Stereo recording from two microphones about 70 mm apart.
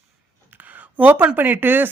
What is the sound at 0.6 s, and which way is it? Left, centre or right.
Speech, right.